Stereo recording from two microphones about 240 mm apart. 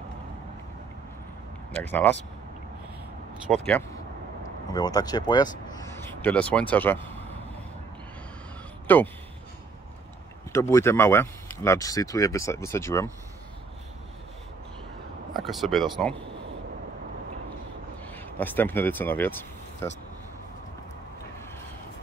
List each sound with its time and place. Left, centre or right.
1.7 s speech: centre
3.5 s speech: centre
4.7 s speech: centre
8.8 s speech: centre
10.5 s speech: centre
15.3 s speech: centre
18.0 s speech: centre